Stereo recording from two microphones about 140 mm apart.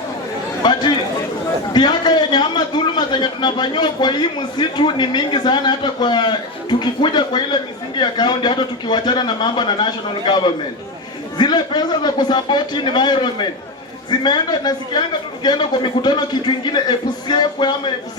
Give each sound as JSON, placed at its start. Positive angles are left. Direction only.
{"t": 0.6, "sound": "chatter", "side_deg": 30}
{"t": 1.7, "sound": "a man's voice", "side_deg": 30}